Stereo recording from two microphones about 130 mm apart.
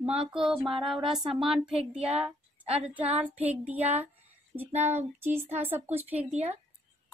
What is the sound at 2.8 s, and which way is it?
Child singing, 10° right (ahead or behind).